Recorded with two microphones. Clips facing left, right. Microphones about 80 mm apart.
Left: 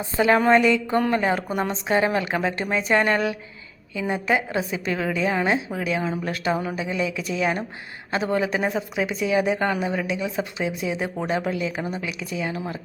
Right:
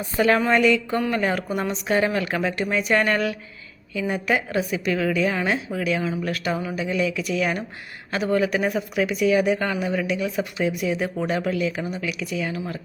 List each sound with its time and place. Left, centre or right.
0.0 s speech: left
0.3 s speech: left